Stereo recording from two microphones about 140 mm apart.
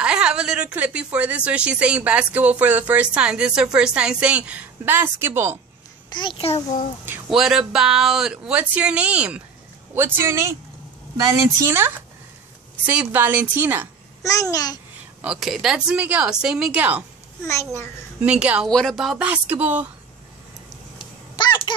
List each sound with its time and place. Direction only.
0.0 s a woman's voice: 5° right (ahead or behind)
6.0 s a child's voice: 35° left (ahead or behind)
7.2 s a woman's voice: 5° right (ahead or behind)
14.2 s a child's voice: 25° left (ahead or behind)
15.2 s speech: centre (ahead or behind)
18.2 s a woman's voice: 10° right (ahead or behind)
18.7 s a woman's voice: 5° left (ahead or behind)
21.4 s a sound: 35° left (ahead or behind)